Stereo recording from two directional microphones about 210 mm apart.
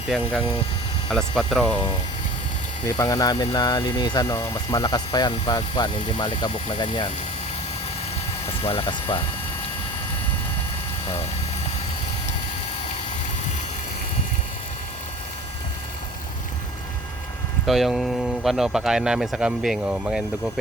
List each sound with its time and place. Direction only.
0.1 s speech: 5° right (ahead or behind)
2.8 s speech: 15° left (ahead or behind)
8.4 s speech: 25° left (ahead or behind)
17.7 s speech: centre (ahead or behind)